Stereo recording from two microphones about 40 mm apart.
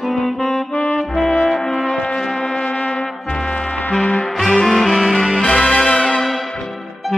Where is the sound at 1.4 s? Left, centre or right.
Centre.